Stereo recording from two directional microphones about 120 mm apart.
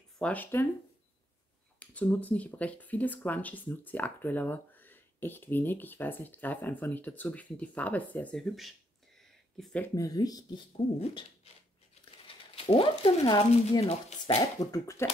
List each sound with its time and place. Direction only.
0.2 s speech: 15° left (ahead or behind)
1.8 s speech: 15° left (ahead or behind)
9.9 s speech: 30° left (ahead or behind)
12.5 s speech: 50° left (ahead or behind)
14.2 s speech: 30° left (ahead or behind)